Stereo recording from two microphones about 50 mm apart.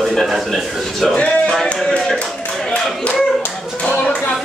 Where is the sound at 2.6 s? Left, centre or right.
Left.